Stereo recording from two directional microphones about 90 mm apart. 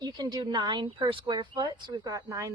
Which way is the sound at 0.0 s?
50° right (ahead or behind).